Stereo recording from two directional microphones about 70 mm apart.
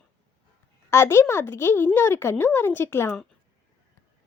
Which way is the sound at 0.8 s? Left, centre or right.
Left.